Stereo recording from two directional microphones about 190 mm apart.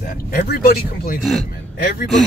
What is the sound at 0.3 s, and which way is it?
Speech, 50° left (ahead or behind).